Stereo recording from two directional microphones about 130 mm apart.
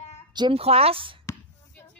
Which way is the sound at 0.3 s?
35° right (ahead or behind).